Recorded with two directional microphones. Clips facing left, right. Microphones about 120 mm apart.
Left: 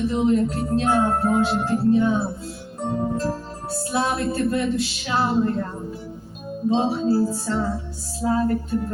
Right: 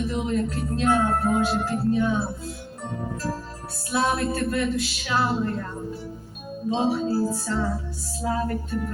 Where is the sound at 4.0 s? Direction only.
30° left (ahead or behind).